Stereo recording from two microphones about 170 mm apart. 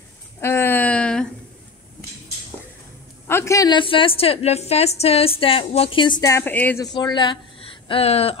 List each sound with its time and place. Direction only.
0.4 s a sound: 15° left (ahead or behind)
3.3 s a woman's voice: 15° left (ahead or behind)
6.9 s speech: 25° left (ahead or behind)